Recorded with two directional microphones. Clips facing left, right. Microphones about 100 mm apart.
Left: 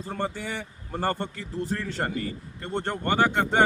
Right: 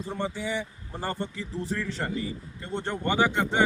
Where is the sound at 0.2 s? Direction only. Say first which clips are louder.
Right 1 dB; 55° left (ahead or behind).